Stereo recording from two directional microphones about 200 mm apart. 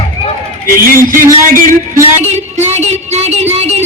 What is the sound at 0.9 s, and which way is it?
Speech, 45° right (ahead or behind).